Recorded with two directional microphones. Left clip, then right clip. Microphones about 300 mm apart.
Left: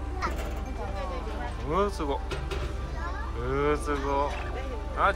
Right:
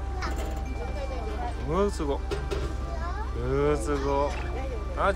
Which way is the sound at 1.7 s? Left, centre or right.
Centre.